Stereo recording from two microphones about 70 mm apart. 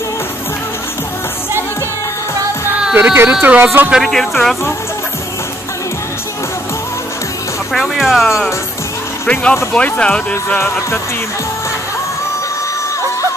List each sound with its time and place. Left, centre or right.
3.0 s speech: right
3.3 s speech: centre
3.5 s speech: right
4.0 s speech: centre
7.7 s speech: centre
9.3 s speech: centre